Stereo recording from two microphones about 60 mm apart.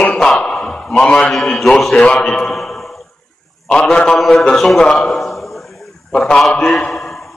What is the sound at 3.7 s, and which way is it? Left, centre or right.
Speech, centre.